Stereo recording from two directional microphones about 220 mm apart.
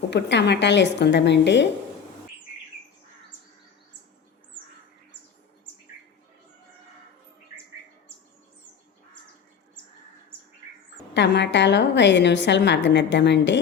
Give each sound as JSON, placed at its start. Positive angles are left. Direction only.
{"t": 0.1, "sound": "a woman's voice", "side_deg": 50}
{"t": 11.1, "sound": "a woman's voice", "side_deg": 55}